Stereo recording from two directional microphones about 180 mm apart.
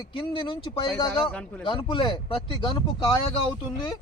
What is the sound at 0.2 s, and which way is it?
Speech, 25° left (ahead or behind).